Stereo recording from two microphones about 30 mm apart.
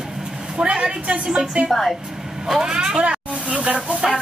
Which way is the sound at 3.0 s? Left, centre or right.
Right.